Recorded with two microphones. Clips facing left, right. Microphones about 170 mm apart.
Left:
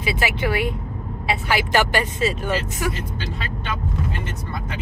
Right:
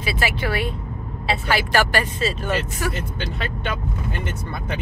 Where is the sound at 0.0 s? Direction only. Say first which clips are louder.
Left 1 dB; 15° left (ahead or behind).